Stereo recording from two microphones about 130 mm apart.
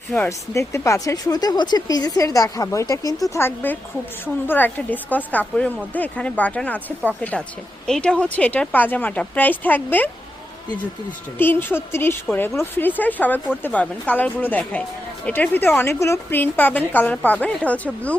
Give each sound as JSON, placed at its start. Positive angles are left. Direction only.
{"t": 0.3, "sound": "a woman's voice", "side_deg": 25}
{"t": 11.3, "sound": "a woman's voice", "side_deg": 15}